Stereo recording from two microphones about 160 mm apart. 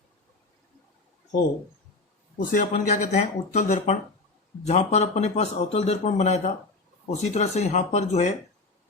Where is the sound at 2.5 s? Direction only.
55° left (ahead or behind).